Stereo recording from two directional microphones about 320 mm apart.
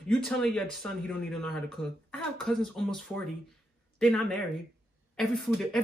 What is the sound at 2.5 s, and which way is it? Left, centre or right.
Speech, centre.